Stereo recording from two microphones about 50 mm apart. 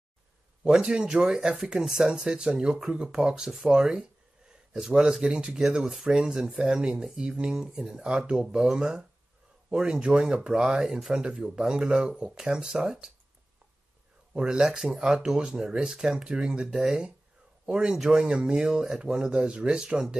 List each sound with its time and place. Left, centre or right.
0.7 s a man's voice: centre
14.3 s speech: centre
14.6 s speech: centre
16.7 s speech: centre
17.6 s speech: centre